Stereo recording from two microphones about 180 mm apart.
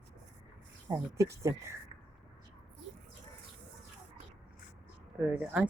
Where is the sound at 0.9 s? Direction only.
15° right (ahead or behind).